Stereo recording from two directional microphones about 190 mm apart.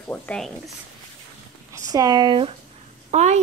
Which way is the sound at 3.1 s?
35° right (ahead or behind).